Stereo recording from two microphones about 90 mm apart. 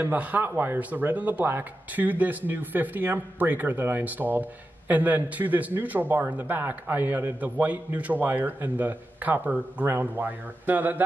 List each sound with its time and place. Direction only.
0.0 s a man's voice: 20° right (ahead or behind)